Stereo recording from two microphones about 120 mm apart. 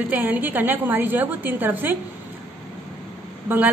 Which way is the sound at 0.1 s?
15° right (ahead or behind).